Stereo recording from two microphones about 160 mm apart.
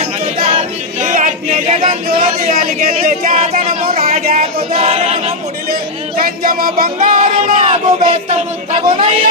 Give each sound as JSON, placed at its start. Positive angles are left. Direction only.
{"t": 0.0, "sound": "choir", "side_deg": -45}
{"t": 2.5, "sound": "speech", "side_deg": -60}
{"t": 4.2, "sound": "a sound", "side_deg": -65}
{"t": 4.7, "sound": "a capella", "side_deg": -40}
{"t": 5.7, "sound": "music", "side_deg": -65}
{"t": 7.5, "sound": "speech", "side_deg": -35}